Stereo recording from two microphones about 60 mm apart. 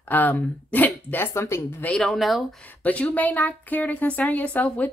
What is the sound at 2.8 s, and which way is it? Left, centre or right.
A woman's voice, left.